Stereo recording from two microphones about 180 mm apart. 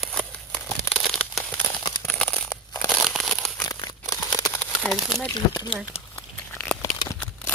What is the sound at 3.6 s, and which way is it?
Crumpling, 20° left (ahead or behind).